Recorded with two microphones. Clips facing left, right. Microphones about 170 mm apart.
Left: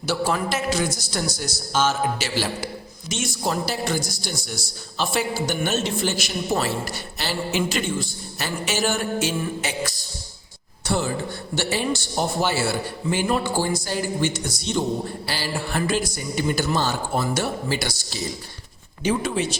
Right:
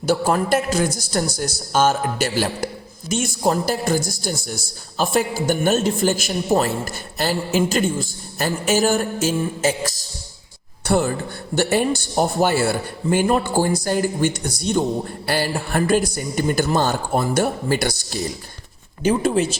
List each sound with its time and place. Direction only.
0.0 s a man's voice: 50° right (ahead or behind)
10.8 s a woman's voice: 60° right (ahead or behind)